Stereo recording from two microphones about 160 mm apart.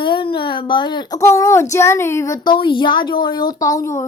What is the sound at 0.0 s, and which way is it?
Speech, 30° left (ahead or behind).